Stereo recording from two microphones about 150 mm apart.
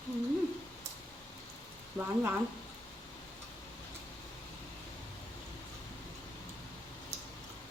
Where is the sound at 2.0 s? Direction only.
15° right (ahead or behind).